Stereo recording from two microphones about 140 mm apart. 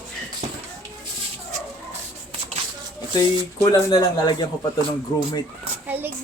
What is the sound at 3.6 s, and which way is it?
Speech, 30° left (ahead or behind).